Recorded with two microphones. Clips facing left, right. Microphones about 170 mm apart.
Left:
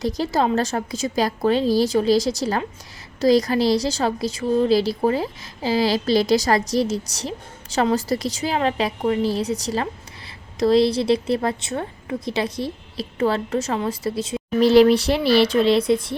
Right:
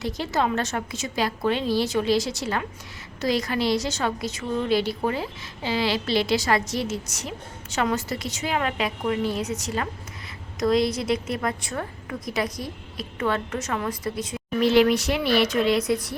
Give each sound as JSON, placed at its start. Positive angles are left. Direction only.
{"t": 0.0, "sound": "a woman's voice", "side_deg": 40}